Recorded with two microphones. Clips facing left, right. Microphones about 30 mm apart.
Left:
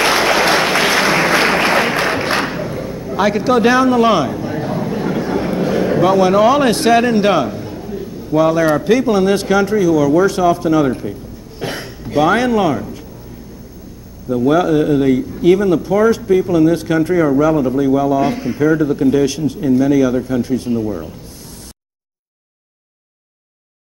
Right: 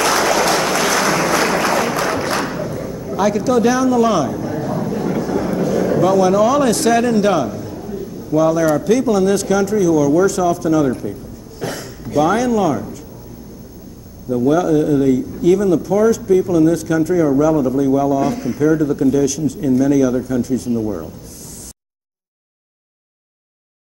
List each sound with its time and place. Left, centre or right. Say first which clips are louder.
0.0 s applause: left 2 dB; left
11.6 s a sound: left 1 dB; left
12.1 s a man's voice: left 2 dB; left
14.3 s a man's voice: left 1 dB; left